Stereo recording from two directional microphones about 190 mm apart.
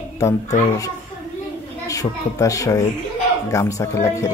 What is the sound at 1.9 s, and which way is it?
Speech, 15° left (ahead or behind).